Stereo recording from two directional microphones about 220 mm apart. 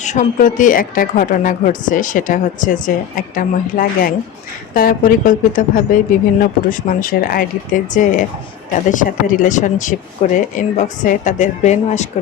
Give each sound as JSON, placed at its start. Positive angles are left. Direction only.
{"t": 0.0, "sound": "a woman's voice", "side_deg": 35}